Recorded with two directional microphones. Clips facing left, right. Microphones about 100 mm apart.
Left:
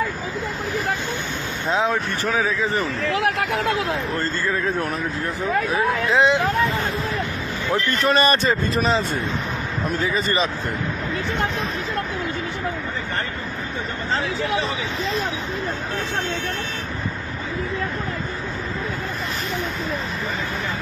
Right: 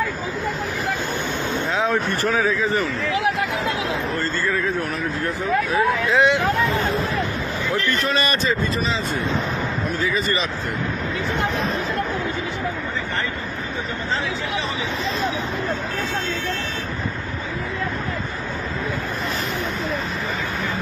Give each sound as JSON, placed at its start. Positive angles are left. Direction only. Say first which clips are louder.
{"t": 3.1, "sound": "speech", "louder": "left 1 dB", "side_deg": 55}
{"t": 5.7, "sound": "speech", "louder": "right 1 dB", "side_deg": 25}
{"t": 8.0, "sound": "speech", "louder": "left 4 dB", "side_deg": 40}
{"t": 8.7, "sound": "speech", "louder": "left 4 dB", "side_deg": 55}
{"t": 9.9, "sound": "speech", "louder": "left 2 dB", "side_deg": 40}